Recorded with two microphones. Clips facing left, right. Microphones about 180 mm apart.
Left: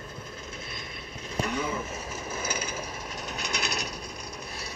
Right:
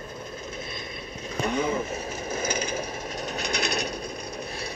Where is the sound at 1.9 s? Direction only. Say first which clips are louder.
Right 4 dB; 65° right (ahead or behind).